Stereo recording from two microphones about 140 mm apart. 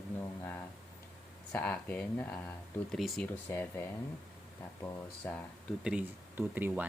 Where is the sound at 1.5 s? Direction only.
10° left (ahead or behind).